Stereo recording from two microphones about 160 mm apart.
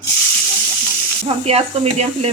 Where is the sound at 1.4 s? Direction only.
40° right (ahead or behind).